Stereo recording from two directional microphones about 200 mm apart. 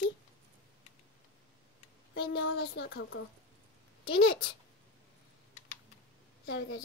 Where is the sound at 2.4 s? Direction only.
55° left (ahead or behind).